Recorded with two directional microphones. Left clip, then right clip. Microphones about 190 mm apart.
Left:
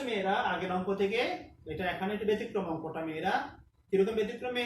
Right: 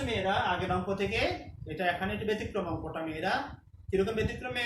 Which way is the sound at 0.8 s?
20° right (ahead or behind).